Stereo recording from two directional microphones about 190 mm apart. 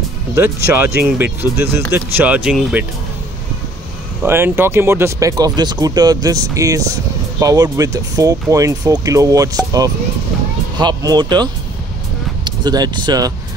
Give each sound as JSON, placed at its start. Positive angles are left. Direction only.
{"t": 0.7, "sound": "speech", "side_deg": -10}
{"t": 4.2, "sound": "speech", "side_deg": -10}
{"t": 12.4, "sound": "speech", "side_deg": -20}